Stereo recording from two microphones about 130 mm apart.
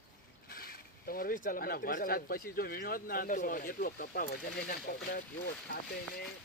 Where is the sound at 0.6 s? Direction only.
90° left.